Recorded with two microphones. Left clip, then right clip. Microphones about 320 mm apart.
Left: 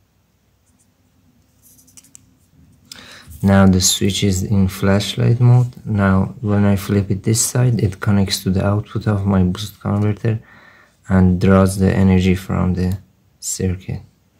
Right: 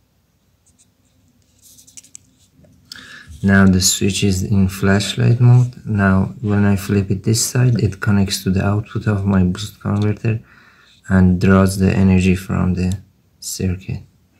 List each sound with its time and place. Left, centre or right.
1.6 s a sound: centre
2.9 s clicking: centre
3.9 s speech: centre